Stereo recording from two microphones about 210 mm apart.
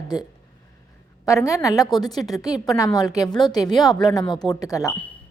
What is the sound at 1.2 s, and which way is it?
A woman's voice, 15° left (ahead or behind).